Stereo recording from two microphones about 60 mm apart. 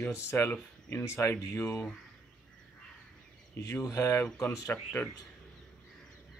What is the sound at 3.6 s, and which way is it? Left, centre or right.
Speech, left.